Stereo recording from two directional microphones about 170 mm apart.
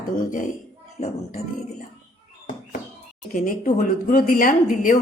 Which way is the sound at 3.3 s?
50° left (ahead or behind).